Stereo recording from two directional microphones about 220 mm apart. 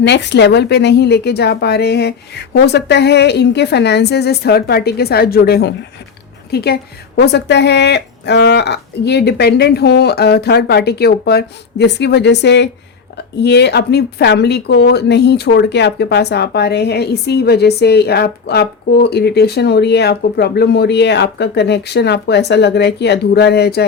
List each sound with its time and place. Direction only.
0.0 s a woman's voice: 50° left (ahead or behind)